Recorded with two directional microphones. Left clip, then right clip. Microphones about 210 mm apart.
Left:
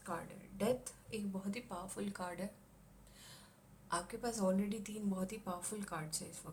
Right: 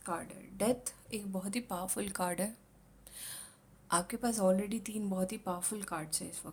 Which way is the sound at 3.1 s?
50° right (ahead or behind).